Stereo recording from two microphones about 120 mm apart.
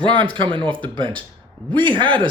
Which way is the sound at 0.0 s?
45° right (ahead or behind).